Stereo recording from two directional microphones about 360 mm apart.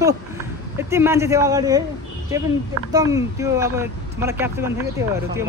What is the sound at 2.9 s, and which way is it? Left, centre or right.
Speech, centre.